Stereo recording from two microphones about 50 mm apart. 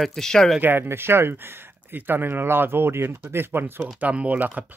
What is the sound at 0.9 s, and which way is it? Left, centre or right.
Speech, right.